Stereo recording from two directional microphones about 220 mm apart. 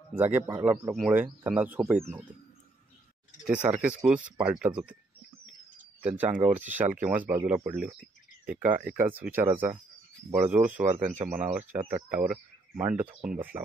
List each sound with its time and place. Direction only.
0.2 s speech: 10° right (ahead or behind)
3.4 s speech: 5° right (ahead or behind)
5.5 s a sound: 5° right (ahead or behind)
6.5 s speech: 10° right (ahead or behind)
10.9 s a man's voice: 30° right (ahead or behind)
11.1 s speech: 10° right (ahead or behind)